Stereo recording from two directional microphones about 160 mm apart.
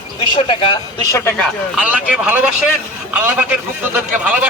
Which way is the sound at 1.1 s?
15° left (ahead or behind).